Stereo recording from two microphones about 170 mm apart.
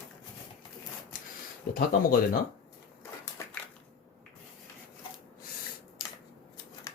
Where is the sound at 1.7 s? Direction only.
60° left (ahead or behind).